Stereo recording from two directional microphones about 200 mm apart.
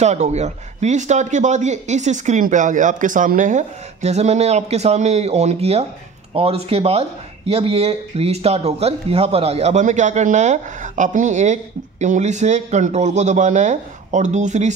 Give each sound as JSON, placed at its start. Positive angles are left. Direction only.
{"t": 0.0, "sound": "speech", "side_deg": -35}